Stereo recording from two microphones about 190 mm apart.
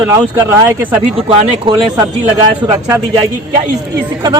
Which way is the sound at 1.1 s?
25° right (ahead or behind).